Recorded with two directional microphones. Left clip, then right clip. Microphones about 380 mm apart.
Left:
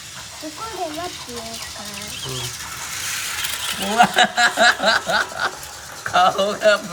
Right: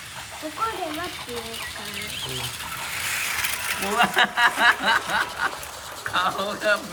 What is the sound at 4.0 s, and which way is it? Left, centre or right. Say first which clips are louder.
Snicker: left 5 dB; centre.